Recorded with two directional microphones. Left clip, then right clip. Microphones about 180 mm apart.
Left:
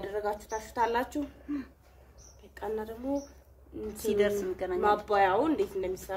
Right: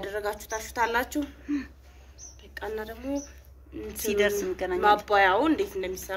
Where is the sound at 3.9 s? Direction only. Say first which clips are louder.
Right 3 dB; 10° right (ahead or behind).